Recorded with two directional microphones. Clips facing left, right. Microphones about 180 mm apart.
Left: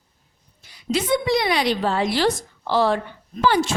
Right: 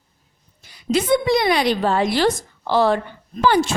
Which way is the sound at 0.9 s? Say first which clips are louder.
Right 3 dB; 50° right (ahead or behind).